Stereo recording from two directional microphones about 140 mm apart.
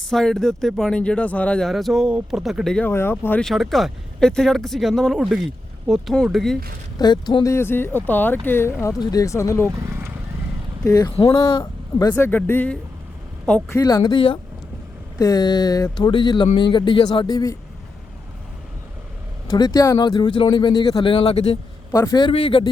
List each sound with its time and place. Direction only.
0.1 s speech: 5° left (ahead or behind)
2.9 s speech: 15° left (ahead or behind)
3.4 s speech: centre (ahead or behind)
7.0 s speech: 30° left (ahead or behind)
9.8 s vehicle: 20° right (ahead or behind)
10.8 s speech: 25° left (ahead or behind)
12.1 s speech: 15° left (ahead or behind)
13.7 s speech: 25° left (ahead or behind)
15.2 s speech: 30° left (ahead or behind)
19.5 s speech: 30° left (ahead or behind)
21.9 s speech: 30° left (ahead or behind)